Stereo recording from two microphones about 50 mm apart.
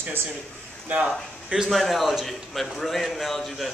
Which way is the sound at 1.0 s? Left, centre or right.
Centre.